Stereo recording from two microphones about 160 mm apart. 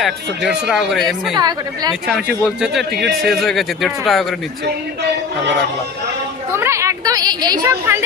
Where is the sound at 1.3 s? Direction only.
25° right (ahead or behind).